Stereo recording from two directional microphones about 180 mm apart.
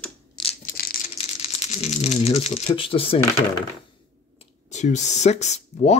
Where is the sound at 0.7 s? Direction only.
50° left (ahead or behind).